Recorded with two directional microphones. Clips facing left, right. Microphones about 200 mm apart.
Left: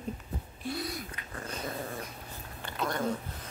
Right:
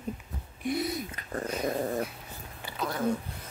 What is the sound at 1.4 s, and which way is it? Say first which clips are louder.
Dog: right 7 dB; 10° right (ahead or behind).